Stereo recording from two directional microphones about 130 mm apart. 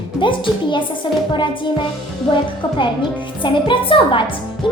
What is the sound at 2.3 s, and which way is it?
A child's voice, 40° left (ahead or behind).